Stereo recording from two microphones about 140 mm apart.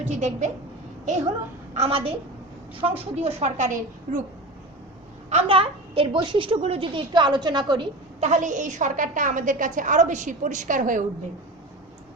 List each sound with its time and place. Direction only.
0.0 s a woman's voice: 60° right (ahead or behind)
1.7 s a woman's voice: 45° right (ahead or behind); by 4.2 s 60° right (ahead or behind)
5.3 s a woman's voice: 45° right (ahead or behind)
8.2 s a woman's voice: 60° right (ahead or behind)